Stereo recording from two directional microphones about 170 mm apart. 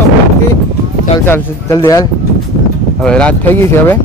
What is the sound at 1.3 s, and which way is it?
Speech, 15° left (ahead or behind).